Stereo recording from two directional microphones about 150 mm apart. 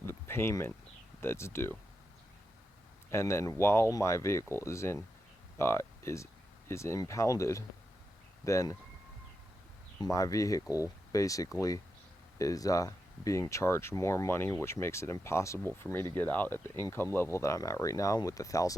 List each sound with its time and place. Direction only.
0.0 s a sound: 15° left (ahead or behind)
1.2 s speech: 15° left (ahead or behind)
3.1 s speech: 20° left (ahead or behind)
10.0 s speech: 20° left (ahead or behind)